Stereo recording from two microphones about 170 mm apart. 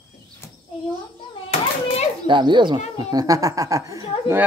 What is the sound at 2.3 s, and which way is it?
Speech, 30° right (ahead or behind).